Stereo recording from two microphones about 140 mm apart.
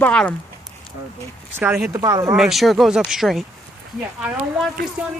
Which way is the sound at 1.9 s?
25° right (ahead or behind).